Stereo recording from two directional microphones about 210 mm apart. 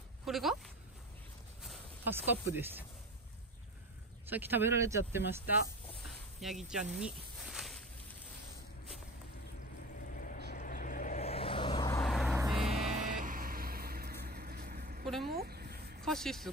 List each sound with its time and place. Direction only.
0.2 s speech: centre (ahead or behind)
1.6 s speech: 5° right (ahead or behind)
4.3 s speech: 10° right (ahead or behind)
10.2 s vehicle: 40° left (ahead or behind); by 12.0 s 20° left (ahead or behind)
12.0 s vehicle: centre (ahead or behind)
12.6 s vehicle: 30° right (ahead or behind); by 15.0 s 45° right (ahead or behind)
15.2 s a sound: 45° right (ahead or behind)
16.0 s vehicle: centre (ahead or behind)